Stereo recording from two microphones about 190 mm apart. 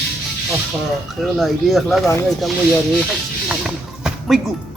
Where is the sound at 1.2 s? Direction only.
Centre (ahead or behind).